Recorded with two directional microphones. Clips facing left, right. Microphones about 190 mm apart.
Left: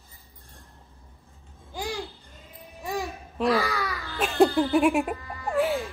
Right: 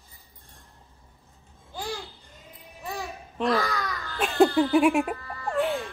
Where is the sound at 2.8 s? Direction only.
15° left (ahead or behind).